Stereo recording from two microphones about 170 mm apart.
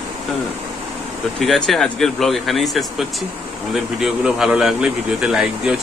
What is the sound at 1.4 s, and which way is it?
A man's voice, centre (ahead or behind).